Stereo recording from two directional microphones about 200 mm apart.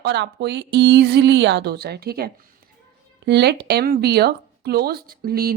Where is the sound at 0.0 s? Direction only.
60° right (ahead or behind).